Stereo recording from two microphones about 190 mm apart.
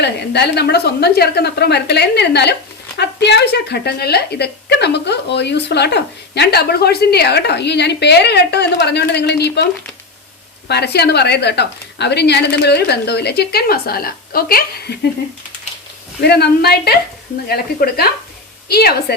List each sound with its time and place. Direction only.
0.0 s a woman's voice: 60° left (ahead or behind)
10.7 s a woman's voice: 60° left (ahead or behind)
16.2 s a woman's voice: 60° left (ahead or behind)